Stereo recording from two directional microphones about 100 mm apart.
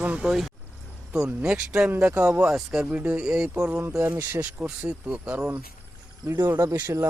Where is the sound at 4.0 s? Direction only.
25° right (ahead or behind).